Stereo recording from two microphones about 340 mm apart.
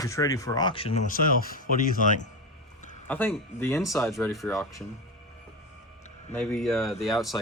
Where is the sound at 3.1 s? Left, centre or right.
Centre.